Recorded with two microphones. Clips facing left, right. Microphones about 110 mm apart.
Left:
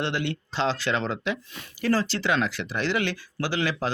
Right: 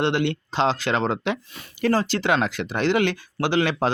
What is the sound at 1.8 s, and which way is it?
Speech, 50° right (ahead or behind).